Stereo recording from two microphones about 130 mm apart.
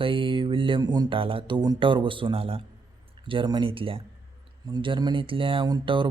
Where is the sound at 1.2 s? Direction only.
45° right (ahead or behind).